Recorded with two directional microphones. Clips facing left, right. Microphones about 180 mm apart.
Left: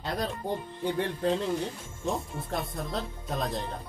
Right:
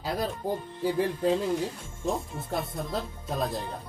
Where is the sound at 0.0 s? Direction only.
5° right (ahead or behind).